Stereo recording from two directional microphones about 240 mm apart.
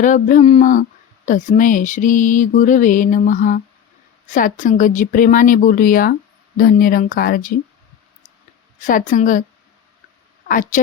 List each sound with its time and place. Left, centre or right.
0.0 s speech: left
8.8 s speech: left
10.5 s speech: left